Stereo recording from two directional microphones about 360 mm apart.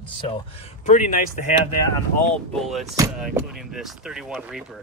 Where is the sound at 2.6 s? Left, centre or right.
Centre.